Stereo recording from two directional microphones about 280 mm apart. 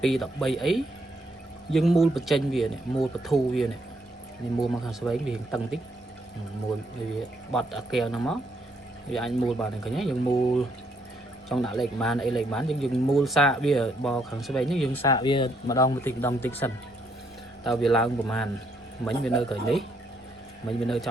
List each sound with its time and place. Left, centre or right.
0.0 s speech: centre
7.5 s speech: centre
11.4 s speech: centre
15.0 s a man's voice: centre